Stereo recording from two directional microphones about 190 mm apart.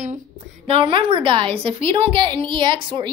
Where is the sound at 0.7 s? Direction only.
25° right (ahead or behind).